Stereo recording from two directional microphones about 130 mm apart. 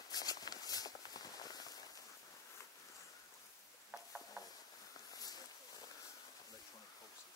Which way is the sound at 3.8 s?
5° right (ahead or behind).